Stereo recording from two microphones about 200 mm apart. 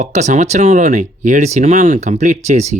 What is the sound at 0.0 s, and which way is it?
Speech, 35° right (ahead or behind).